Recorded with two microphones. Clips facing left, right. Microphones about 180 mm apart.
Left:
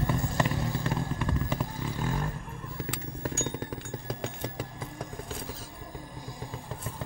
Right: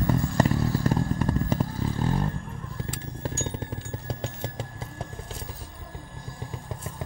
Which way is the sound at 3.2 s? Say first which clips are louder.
Even; 25° right (ahead or behind).